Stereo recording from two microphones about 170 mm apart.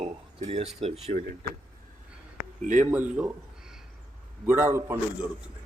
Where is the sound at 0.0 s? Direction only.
40° right (ahead or behind).